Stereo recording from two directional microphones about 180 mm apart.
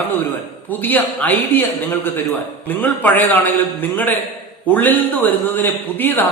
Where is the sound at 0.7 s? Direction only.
10° left (ahead or behind).